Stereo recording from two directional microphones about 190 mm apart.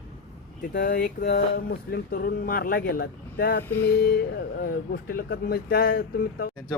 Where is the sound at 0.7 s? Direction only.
50° left (ahead or behind).